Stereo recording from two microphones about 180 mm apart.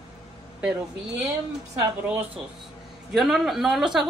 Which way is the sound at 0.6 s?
10° right (ahead or behind).